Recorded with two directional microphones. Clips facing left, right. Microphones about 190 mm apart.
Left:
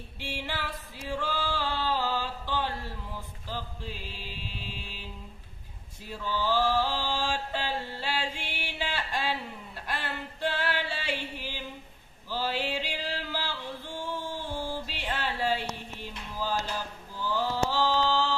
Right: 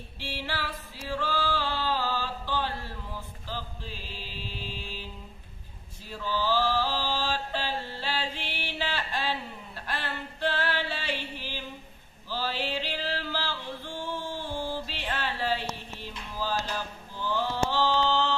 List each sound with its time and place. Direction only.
0.2 s music: 15° left (ahead or behind)
6.2 s mantra: 15° left (ahead or behind)
8.0 s music: 10° left (ahead or behind)
14.1 s a sound: 10° left (ahead or behind)
16.3 s mantra: 10° left (ahead or behind)